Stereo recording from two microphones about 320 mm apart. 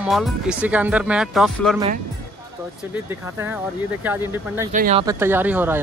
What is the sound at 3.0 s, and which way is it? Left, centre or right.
Speech, centre.